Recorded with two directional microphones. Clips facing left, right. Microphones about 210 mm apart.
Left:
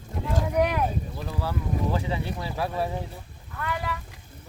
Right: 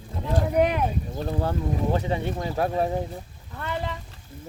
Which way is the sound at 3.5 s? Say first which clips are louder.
Right 1 dB; 30° right (ahead or behind).